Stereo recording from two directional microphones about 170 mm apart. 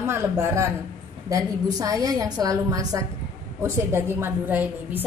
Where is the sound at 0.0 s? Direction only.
15° right (ahead or behind).